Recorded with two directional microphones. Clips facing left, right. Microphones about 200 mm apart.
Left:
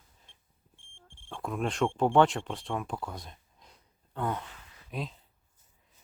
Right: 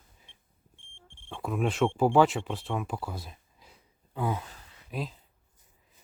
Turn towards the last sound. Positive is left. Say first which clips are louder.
# right 2 dB
turn(degrees=0)  # may be behind; listen again after turning